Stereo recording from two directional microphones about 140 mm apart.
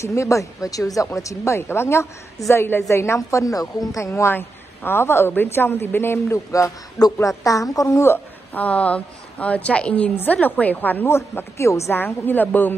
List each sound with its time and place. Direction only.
0.0 s a woman's voice: 20° left (ahead or behind)